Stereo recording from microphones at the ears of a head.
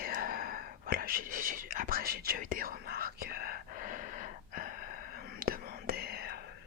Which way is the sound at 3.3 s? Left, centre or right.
Left.